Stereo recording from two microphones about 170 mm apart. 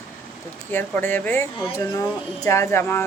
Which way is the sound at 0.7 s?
10° left (ahead or behind).